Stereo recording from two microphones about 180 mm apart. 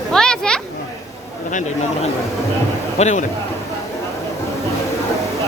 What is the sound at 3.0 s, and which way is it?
Speech, 40° left (ahead or behind).